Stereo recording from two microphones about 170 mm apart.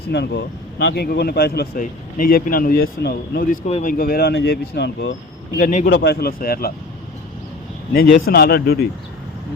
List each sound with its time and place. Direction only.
0.1 s speech: 80° left
1.8 s speech: 55° left (ahead or behind)
3.7 s speech: 40° left (ahead or behind)
3.9 s speech: 60° left (ahead or behind); by 5.1 s 75° left (ahead or behind)
5.5 s a man's voice: 50° left (ahead or behind)
5.9 s speech: 70° left (ahead or behind)
7.9 s speech: 55° left (ahead or behind)